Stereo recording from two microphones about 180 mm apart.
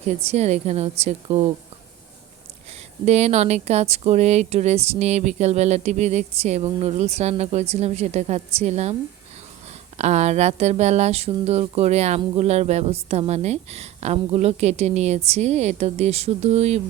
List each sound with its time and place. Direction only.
0.2 s speech: 35° right (ahead or behind)
3.1 s speech: 35° right (ahead or behind)
10.0 s speech: 40° right (ahead or behind)